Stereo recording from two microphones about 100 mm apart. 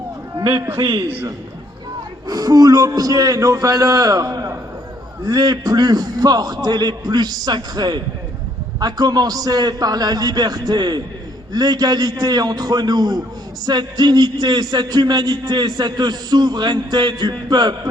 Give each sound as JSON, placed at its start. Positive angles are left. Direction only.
{"t": 1.0, "sound": "a man's voice", "side_deg": -20}
{"t": 2.2, "sound": "a man's voice", "side_deg": -40}